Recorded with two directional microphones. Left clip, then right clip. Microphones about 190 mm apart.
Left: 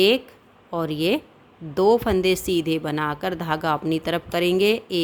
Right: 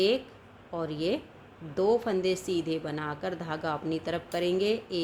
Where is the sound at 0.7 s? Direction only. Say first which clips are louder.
Left 8 dB; 45° left (ahead or behind).